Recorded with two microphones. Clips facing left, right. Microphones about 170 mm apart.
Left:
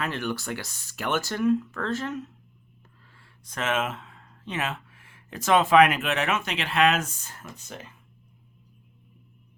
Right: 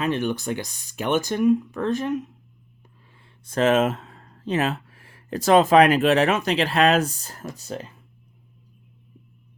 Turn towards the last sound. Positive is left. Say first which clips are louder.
# right 8 dB
turn(degrees=-35)  # may be behind; listen again after turning